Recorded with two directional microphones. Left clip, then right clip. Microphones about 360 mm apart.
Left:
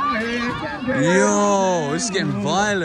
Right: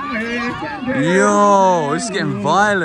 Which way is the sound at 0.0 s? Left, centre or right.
Left.